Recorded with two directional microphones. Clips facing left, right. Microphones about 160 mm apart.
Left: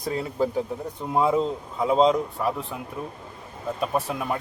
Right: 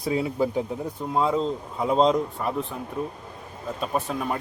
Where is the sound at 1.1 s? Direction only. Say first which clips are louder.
Left 2 dB; 10° left (ahead or behind).